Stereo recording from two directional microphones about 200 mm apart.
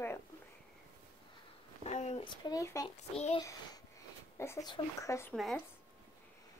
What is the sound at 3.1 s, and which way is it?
Speech, 30° left (ahead or behind).